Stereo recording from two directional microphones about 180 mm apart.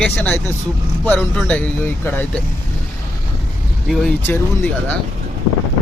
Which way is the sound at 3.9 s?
5° left (ahead or behind).